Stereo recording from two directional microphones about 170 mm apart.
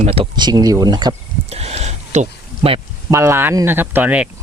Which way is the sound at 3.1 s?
15° right (ahead or behind).